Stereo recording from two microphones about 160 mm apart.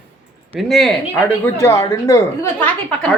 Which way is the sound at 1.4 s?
20° left (ahead or behind).